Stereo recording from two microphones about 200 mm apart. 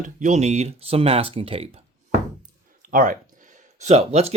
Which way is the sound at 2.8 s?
40° right (ahead or behind).